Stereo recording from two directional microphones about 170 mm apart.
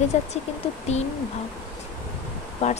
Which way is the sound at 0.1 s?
40° left (ahead or behind).